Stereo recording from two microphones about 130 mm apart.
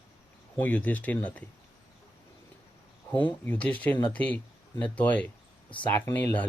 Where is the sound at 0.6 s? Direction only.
10° left (ahead or behind).